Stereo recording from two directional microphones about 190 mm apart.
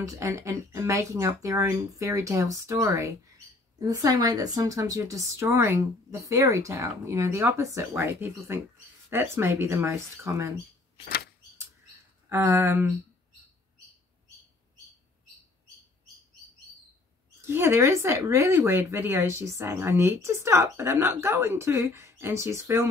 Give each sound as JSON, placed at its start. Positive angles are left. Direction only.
{"t": 0.2, "sound": "speech", "side_deg": -15}
{"t": 12.3, "sound": "speech", "side_deg": -15}
{"t": 17.5, "sound": "speech", "side_deg": -15}